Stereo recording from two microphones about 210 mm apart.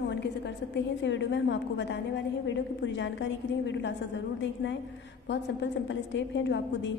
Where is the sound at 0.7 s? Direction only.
60° left (ahead or behind).